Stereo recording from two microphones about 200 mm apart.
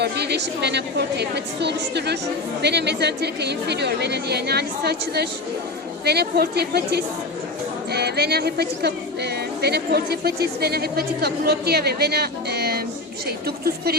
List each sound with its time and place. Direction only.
0.0 s a woman's voice: 55° right (ahead or behind)